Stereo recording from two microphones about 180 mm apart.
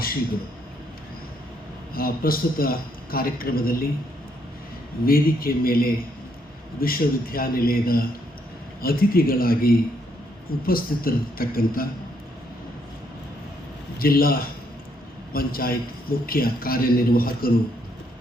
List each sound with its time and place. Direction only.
1.9 s a man's voice: 55° left (ahead or behind)
5.0 s a man's voice: 55° left (ahead or behind)
14.0 s a man's voice: 55° left (ahead or behind)